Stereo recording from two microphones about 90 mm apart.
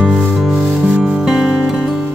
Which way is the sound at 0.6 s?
15° right (ahead or behind).